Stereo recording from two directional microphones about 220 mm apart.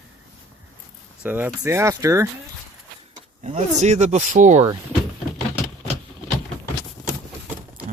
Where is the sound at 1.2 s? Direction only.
10° right (ahead or behind).